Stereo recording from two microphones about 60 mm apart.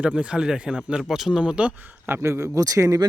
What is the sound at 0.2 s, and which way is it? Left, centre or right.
Speech, centre.